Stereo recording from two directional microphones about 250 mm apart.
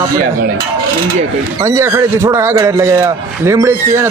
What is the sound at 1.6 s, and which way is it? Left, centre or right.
Speech, centre.